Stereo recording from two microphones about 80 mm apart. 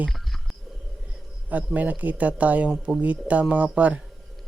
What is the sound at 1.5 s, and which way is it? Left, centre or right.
Speech, centre.